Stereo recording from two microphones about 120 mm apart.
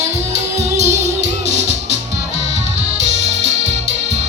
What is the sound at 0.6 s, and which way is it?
Music, 70° right (ahead or behind).